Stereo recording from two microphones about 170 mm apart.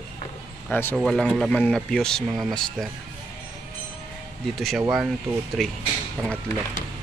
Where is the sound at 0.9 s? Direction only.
Centre (ahead or behind).